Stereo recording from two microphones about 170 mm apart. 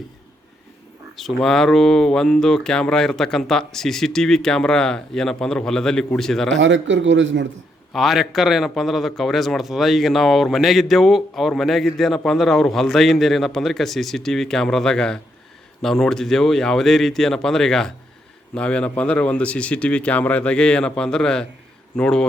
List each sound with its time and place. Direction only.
1.1 s a man's voice: centre (ahead or behind)
6.6 s a man's voice: 90° right
7.9 s a man's voice: centre (ahead or behind)